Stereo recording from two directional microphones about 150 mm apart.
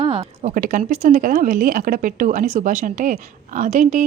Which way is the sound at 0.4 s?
60° right (ahead or behind).